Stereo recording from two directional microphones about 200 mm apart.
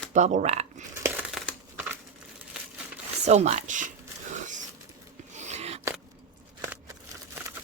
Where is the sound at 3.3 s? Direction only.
35° right (ahead or behind).